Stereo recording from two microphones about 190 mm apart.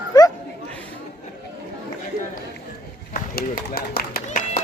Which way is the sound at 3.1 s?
50° left (ahead or behind).